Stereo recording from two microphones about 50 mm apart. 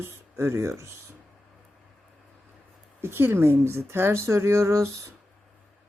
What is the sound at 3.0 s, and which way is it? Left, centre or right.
Speech, right.